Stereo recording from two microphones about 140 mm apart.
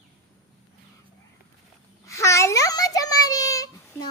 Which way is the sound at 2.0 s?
20° left (ahead or behind).